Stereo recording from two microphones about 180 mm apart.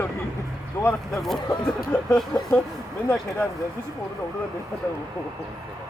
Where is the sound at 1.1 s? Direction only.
Centre (ahead or behind).